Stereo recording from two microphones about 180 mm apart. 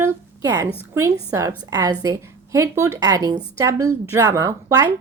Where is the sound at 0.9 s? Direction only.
15° right (ahead or behind).